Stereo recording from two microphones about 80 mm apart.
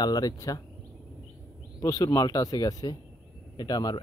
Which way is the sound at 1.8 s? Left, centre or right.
Left.